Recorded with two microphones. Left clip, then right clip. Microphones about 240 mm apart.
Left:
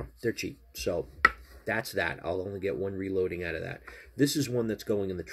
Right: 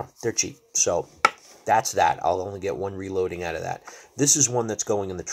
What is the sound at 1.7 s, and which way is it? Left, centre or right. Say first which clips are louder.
Speech: right 11 dB; right.